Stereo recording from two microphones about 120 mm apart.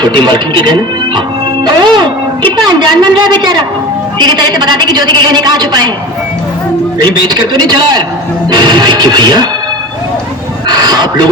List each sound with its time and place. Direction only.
0.0 s a man's voice: 40° right (ahead or behind)
7.0 s a man's voice: 35° right (ahead or behind)
10.7 s a sound: 35° right (ahead or behind)